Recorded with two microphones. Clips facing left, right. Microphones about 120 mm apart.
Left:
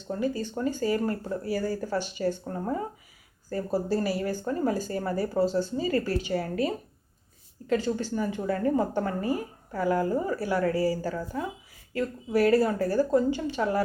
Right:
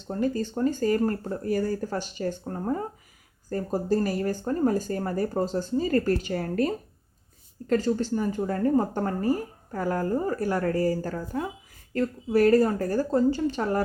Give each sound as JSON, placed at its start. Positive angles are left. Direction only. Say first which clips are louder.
{"t": 0.1, "sound": "speech", "louder": "right 2 dB", "side_deg": -45}